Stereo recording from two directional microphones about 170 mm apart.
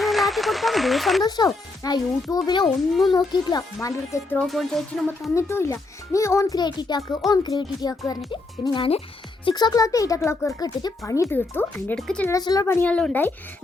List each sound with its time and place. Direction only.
0.0 s speech: centre (ahead or behind)
1.2 s a child's voice: 20° left (ahead or behind)
2.6 s a child's voice: centre (ahead or behind)
3.1 s a child's voice: 25° left (ahead or behind)
4.4 s a child's voice: centre (ahead or behind)
5.3 s a child's voice: 15° left (ahead or behind)
12.3 s a child's voice: 20° left (ahead or behind)
12.6 s a child's voice: 10° left (ahead or behind)